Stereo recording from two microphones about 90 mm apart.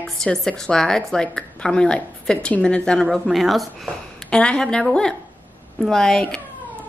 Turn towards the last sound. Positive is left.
turn(degrees=5)  # may be behind; listen again after turning